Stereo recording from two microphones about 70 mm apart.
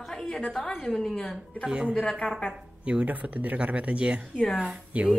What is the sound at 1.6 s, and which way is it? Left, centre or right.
Speech, centre.